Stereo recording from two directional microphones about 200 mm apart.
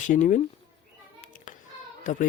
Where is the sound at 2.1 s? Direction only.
40° left (ahead or behind).